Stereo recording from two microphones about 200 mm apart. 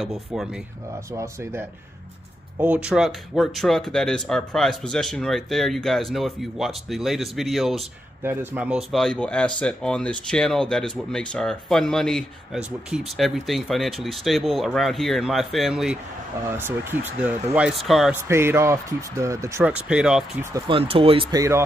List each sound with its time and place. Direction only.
0.0 s speech: centre (ahead or behind)
1.1 s speech: 15° right (ahead or behind)
18.1 s speech: 10° right (ahead or behind)
20.5 s speech: 25° right (ahead or behind)